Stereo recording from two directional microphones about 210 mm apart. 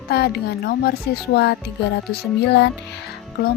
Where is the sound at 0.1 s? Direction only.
50° left (ahead or behind).